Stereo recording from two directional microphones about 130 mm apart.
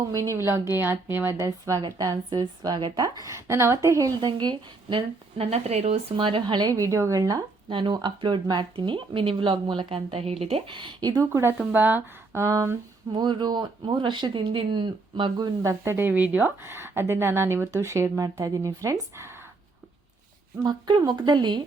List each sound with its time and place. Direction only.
0.1 s speech: 25° right (ahead or behind)
4.3 s speech: 35° right (ahead or behind); by 6.0 s 55° right (ahead or behind)
6.1 s speech: 40° right (ahead or behind)
7.7 s speech: 40° right (ahead or behind)
10.8 s speech: 40° right (ahead or behind)
11.2 s speech: 20° right (ahead or behind)
13.1 s speech: 35° right (ahead or behind)
20.7 s speech: 35° right (ahead or behind)